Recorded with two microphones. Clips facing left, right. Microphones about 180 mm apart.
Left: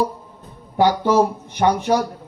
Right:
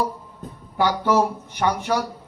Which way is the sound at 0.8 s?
20° left (ahead or behind).